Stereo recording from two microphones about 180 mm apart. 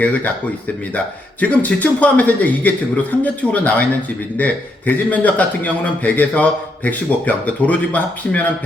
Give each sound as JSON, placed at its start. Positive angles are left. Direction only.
{"t": 0.0, "sound": "a man's voice", "side_deg": 10}